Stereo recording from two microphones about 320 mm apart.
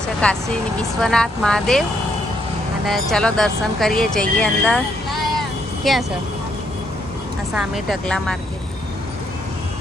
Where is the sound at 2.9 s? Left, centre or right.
Centre.